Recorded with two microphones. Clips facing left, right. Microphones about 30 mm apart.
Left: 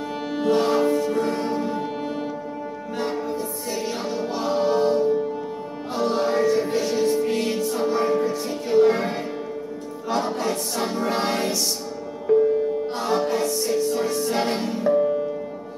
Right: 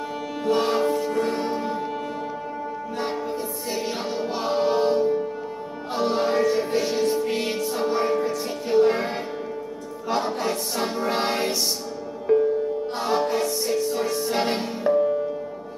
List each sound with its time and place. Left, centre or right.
0.5 s music: centre
3.0 s music: centre
10.0 s choir: centre
12.3 s music: centre